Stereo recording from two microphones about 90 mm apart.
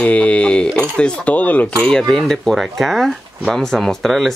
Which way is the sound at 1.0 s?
15° left (ahead or behind).